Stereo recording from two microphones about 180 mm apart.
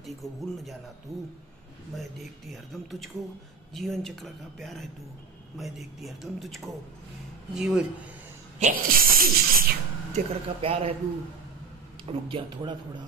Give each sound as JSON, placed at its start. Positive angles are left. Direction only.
{"t": 0.0, "sound": "speech", "side_deg": 0}
{"t": 8.5, "sound": "speech", "side_deg": -45}
{"t": 10.1, "sound": "speech", "side_deg": -35}
{"t": 12.1, "sound": "speech", "side_deg": -30}